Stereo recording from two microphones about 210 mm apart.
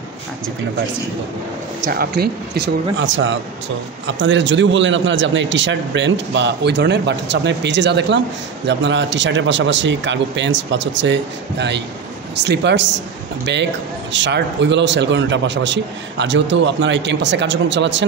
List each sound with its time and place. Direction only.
1.9 s a man's voice: 45° right (ahead or behind)